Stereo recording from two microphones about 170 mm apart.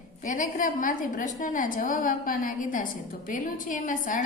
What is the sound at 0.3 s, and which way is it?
A woman's voice, 50° left (ahead or behind).